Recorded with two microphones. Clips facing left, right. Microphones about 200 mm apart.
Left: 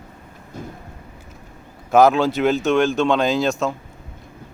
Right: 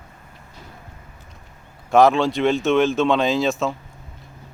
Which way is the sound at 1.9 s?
Centre (ahead or behind).